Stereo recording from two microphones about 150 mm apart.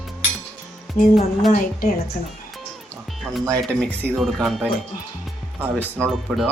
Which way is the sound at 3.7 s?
10° left (ahead or behind).